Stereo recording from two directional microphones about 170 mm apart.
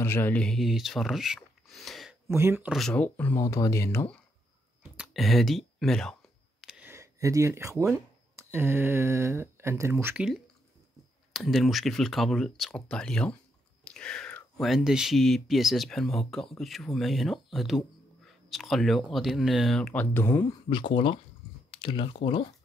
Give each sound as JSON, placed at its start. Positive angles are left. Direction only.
{"t": 0.0, "sound": "speech", "side_deg": 15}
{"t": 2.2, "sound": "speech", "side_deg": -15}
{"t": 2.7, "sound": "speech", "side_deg": 5}
{"t": 4.9, "sound": "speech", "side_deg": 0}
{"t": 6.6, "sound": "a sound", "side_deg": -5}
{"t": 8.4, "sound": "speech", "side_deg": -15}
{"t": 11.3, "sound": "speech", "side_deg": 0}
{"t": 20.7, "sound": "speech", "side_deg": 30}